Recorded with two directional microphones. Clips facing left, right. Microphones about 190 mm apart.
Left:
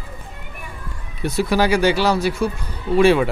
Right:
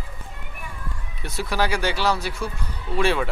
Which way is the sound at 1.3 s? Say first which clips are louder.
Left 7 dB; 15° left (ahead or behind).